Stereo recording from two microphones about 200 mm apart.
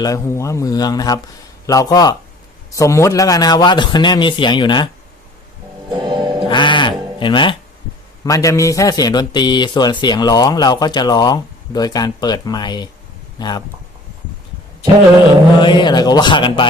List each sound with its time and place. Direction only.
0.0 s a man's voice: 15° left (ahead or behind)
6.0 s music: 25° right (ahead or behind)
6.5 s sheep: 25° left (ahead or behind)
8.2 s a man's voice: 15° left (ahead or behind)
15.6 s a man's voice: 20° left (ahead or behind)